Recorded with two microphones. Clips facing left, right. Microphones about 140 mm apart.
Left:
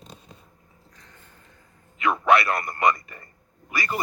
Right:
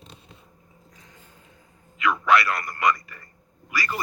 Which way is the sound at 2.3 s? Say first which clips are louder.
Even; 25° left (ahead or behind).